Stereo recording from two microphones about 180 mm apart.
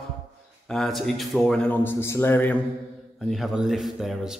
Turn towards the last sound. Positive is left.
turn(degrees=0)  # may be behind; listen again after turning